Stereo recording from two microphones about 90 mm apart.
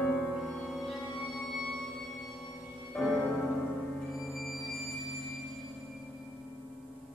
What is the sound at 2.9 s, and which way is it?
Music, 5° left (ahead or behind).